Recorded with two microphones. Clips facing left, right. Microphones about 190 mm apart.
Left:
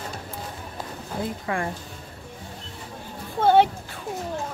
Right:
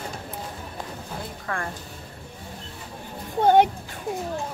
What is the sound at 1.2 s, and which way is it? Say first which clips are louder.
Speech: left 6 dB; 15° left (ahead or behind).